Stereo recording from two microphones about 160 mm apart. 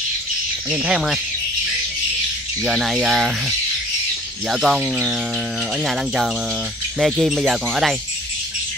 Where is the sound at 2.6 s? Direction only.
Centre (ahead or behind).